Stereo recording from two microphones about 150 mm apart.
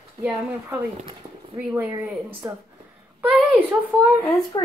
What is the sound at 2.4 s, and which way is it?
Speech, 20° right (ahead or behind).